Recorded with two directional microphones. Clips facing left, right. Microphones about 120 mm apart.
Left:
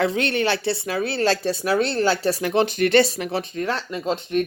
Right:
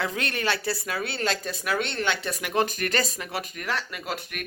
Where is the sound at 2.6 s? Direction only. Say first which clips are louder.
Left 9 dB; 40° right (ahead or behind).